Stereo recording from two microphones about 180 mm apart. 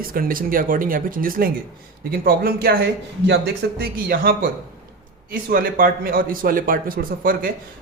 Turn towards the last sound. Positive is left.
turn(degrees=-55)  # may be behind; listen again after turning